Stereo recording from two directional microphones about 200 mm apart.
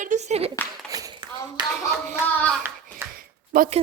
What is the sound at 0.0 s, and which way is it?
Speech, 35° right (ahead or behind).